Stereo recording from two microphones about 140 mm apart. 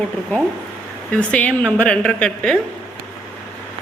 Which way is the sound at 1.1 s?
10° left (ahead or behind).